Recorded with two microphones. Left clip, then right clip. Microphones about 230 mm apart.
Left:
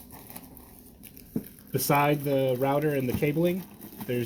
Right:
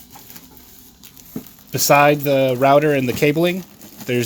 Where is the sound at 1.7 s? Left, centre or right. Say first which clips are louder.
Right 11 dB; right.